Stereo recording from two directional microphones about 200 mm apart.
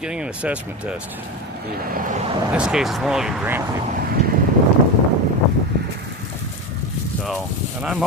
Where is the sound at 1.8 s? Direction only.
45° right (ahead or behind).